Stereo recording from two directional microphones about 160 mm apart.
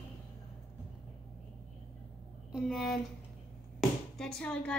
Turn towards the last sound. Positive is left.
turn(degrees=5)  # may be behind; listen again after turning